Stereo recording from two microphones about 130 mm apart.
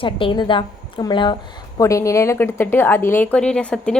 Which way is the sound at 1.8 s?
25° left (ahead or behind).